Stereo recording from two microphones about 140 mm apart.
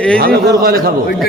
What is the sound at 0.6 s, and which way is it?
Speech, 90° right.